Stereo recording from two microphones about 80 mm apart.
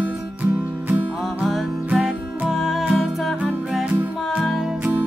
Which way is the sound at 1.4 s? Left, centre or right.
Centre.